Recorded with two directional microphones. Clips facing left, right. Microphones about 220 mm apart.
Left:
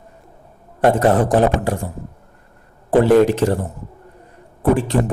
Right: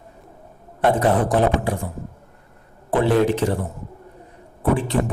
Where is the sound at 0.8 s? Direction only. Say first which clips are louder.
Left 4 dB; 45° left (ahead or behind).